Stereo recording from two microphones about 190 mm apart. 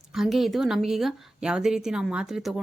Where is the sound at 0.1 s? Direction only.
Centre (ahead or behind).